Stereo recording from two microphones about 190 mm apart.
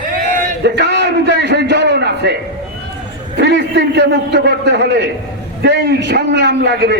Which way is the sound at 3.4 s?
65° right (ahead or behind).